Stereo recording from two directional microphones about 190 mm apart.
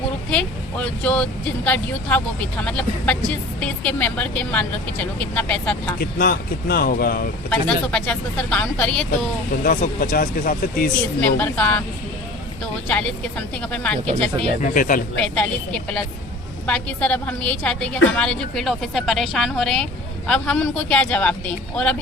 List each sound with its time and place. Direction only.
0.3 s speech: 5° left (ahead or behind)
6.0 s speech: 50° left (ahead or behind)
7.5 s a woman's voice: 5° left (ahead or behind)
9.6 s speech: 45° left (ahead or behind)
11.2 s speech: 10° left (ahead or behind)
12.9 s a woman's voice: 5° left (ahead or behind)
14.6 s speech: 45° left (ahead or behind)
15.2 s a woman's voice: 5° left (ahead or behind)